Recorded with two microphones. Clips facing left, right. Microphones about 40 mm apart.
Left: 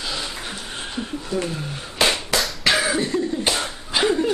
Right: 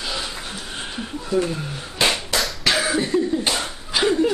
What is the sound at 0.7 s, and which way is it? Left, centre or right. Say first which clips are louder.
Chuckle: left 1 dB; centre.